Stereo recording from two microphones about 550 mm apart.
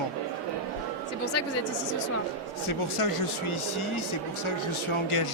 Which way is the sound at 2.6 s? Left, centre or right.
Left.